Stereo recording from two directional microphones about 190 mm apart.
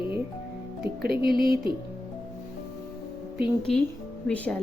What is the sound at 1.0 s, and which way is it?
Speech, 55° right (ahead or behind).